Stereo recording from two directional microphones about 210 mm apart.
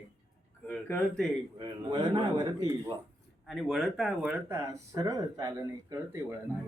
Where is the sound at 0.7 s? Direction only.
Centre (ahead or behind).